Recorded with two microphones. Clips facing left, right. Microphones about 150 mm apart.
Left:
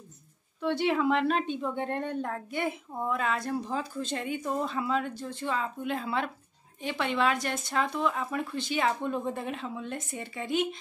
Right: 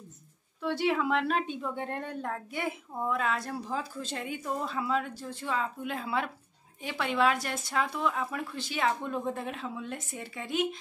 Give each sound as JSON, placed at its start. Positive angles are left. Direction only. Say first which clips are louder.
{"t": 0.6, "sound": "a woman's voice", "louder": "left 2 dB", "side_deg": -5}